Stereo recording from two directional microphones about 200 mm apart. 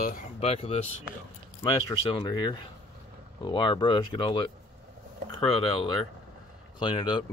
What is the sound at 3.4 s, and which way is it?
Speech, 25° left (ahead or behind).